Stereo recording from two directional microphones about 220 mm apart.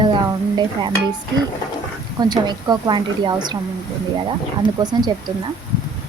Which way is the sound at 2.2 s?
20° right (ahead or behind).